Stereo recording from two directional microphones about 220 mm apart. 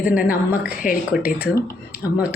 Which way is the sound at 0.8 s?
40° left (ahead or behind).